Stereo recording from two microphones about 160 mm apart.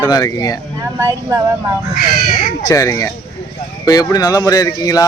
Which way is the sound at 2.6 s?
20° left (ahead or behind).